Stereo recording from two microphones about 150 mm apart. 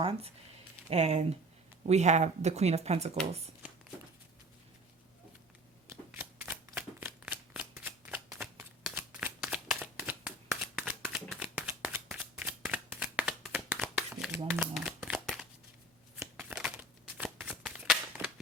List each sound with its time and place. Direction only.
0.9 s speech: 45° right (ahead or behind)
5.9 s shuffling cards: 10° right (ahead or behind)
16.1 s a sound: 5° right (ahead or behind)